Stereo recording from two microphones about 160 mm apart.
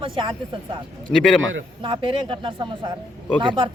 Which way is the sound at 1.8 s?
30° right (ahead or behind).